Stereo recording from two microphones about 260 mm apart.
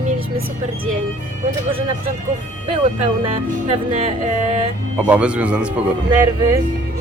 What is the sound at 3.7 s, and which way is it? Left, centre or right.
Speech, right.